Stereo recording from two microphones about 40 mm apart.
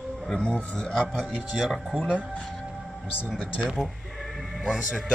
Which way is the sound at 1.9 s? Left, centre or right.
Right.